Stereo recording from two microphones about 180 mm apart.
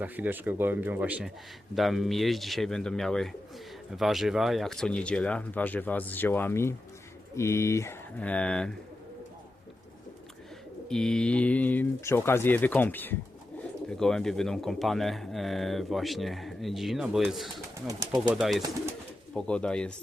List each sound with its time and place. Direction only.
0.0 s speech: 10° right (ahead or behind)
10.8 s speech: 5° left (ahead or behind)
17.8 s speech: 20° right (ahead or behind)
18.3 s speech: centre (ahead or behind)